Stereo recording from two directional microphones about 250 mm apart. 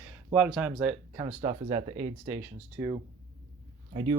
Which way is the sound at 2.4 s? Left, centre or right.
Centre.